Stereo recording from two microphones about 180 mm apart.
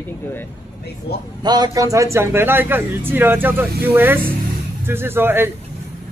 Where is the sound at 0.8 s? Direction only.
60° left (ahead or behind).